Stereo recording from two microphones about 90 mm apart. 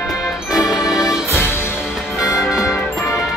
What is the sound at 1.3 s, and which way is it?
Music, 25° left (ahead or behind).